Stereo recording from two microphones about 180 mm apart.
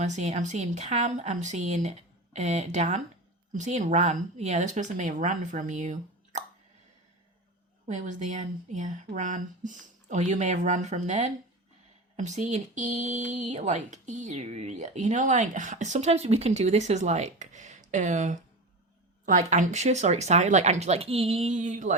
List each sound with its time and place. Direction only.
0.0 s speech: 40° right (ahead or behind)
7.9 s speech: 45° right (ahead or behind)